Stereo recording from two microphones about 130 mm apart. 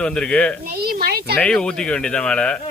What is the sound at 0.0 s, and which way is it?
Speech, 5° left (ahead or behind).